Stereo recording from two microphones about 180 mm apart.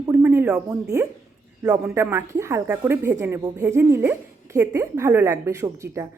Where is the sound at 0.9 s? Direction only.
20° right (ahead or behind).